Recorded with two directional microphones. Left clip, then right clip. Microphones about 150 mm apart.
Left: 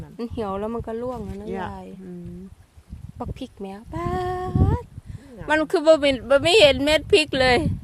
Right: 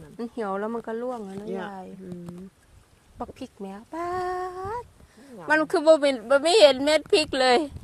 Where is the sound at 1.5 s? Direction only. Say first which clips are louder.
Left 3 dB; 30° left (ahead or behind).